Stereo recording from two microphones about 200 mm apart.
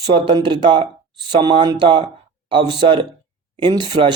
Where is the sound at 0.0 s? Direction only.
20° right (ahead or behind).